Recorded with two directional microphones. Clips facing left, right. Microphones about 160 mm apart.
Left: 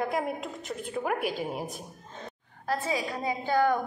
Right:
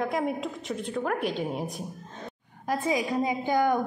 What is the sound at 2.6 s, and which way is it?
A woman's voice, 15° right (ahead or behind).